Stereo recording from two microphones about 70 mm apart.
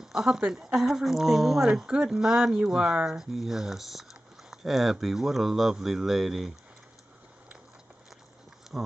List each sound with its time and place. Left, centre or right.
0.0 s speech: centre
8.7 s speech: centre